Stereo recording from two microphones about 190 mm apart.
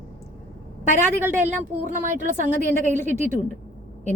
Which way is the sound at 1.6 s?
45° right (ahead or behind).